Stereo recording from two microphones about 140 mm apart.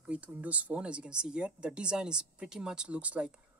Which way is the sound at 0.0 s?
10° right (ahead or behind).